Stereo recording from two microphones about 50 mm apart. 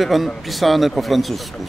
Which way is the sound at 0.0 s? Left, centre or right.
Centre.